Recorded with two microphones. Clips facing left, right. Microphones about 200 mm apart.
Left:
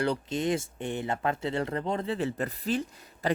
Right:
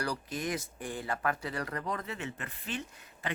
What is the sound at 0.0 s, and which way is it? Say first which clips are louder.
Speech: left 7 dB; 25° left (ahead or behind).